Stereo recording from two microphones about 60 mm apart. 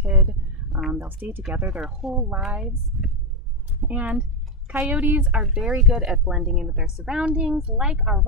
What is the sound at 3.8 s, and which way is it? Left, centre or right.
Speech, right.